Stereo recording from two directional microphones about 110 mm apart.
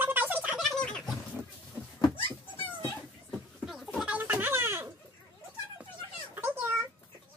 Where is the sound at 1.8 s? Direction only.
10° right (ahead or behind).